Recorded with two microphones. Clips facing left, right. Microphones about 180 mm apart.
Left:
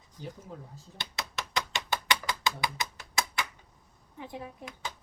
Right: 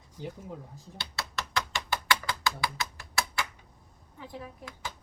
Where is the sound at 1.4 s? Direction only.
20° left (ahead or behind).